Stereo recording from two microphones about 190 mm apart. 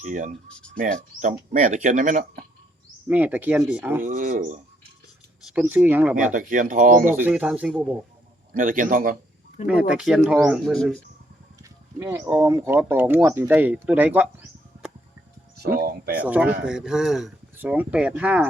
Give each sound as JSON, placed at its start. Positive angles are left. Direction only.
{"t": 0.0, "sound": "speech", "side_deg": -40}
{"t": 0.4, "sound": "speech", "side_deg": 5}
{"t": 0.8, "sound": "speech", "side_deg": -45}
{"t": 3.1, "sound": "speech", "side_deg": -10}
{"t": 4.0, "sound": "speech", "side_deg": -40}
{"t": 5.5, "sound": "speech", "side_deg": -10}
{"t": 6.1, "sound": "speech", "side_deg": -45}
{"t": 7.2, "sound": "speech", "side_deg": -5}
{"t": 8.5, "sound": "speech", "side_deg": -45}
{"t": 9.6, "sound": "speech", "side_deg": -5}
{"t": 11.9, "sound": "speech", "side_deg": -15}
{"t": 15.8, "sound": "speech", "side_deg": -55}
{"t": 16.1, "sound": "speech", "side_deg": -5}